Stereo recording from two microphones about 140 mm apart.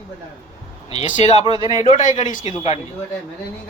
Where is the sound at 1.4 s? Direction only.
35° right (ahead or behind).